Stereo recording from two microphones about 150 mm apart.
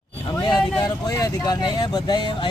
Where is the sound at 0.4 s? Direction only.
30° left (ahead or behind).